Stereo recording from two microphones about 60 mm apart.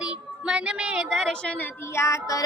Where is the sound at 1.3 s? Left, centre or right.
Centre.